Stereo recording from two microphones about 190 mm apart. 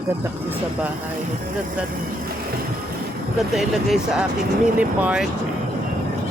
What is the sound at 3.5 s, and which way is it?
Speech, centre (ahead or behind).